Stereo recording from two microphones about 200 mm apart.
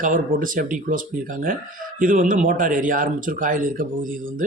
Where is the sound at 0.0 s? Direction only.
40° right (ahead or behind).